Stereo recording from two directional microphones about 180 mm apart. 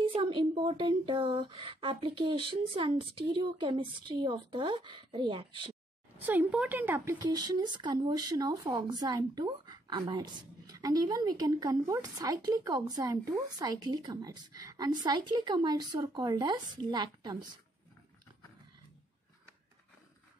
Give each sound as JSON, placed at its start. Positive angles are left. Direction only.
{"t": 0.0, "sound": "speech", "side_deg": -30}
{"t": 6.1, "sound": "a woman's voice", "side_deg": -10}
{"t": 7.2, "sound": "speech", "side_deg": -20}